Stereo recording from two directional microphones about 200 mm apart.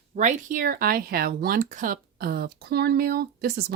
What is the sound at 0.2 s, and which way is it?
Speech, 40° right (ahead or behind).